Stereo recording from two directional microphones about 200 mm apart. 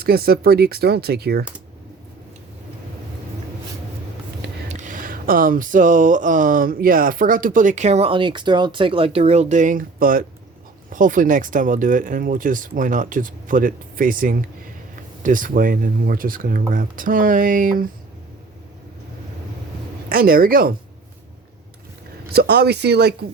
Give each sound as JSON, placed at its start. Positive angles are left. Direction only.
{"t": 0.0, "sound": "speech", "side_deg": -50}
{"t": 4.7, "sound": "a sound", "side_deg": -40}
{"t": 15.2, "sound": "speech", "side_deg": -40}
{"t": 20.1, "sound": "speech", "side_deg": -45}
{"t": 22.3, "sound": "speech", "side_deg": -55}